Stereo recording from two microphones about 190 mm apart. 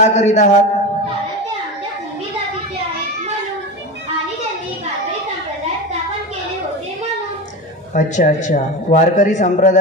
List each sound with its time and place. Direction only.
0.0 s a man's voice: 35° left (ahead or behind)
7.9 s a man's voice: 40° left (ahead or behind)